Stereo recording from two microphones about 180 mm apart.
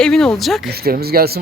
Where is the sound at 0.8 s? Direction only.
60° right (ahead or behind).